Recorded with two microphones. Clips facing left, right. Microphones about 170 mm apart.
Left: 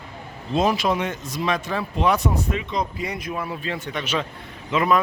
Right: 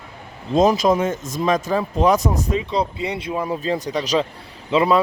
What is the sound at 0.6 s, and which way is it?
Speech, 40° right (ahead or behind).